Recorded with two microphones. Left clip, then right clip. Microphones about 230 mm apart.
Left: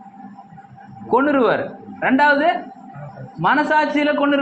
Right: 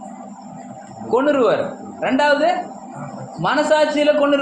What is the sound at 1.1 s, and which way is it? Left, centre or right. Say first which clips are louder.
A man's voice: even; left.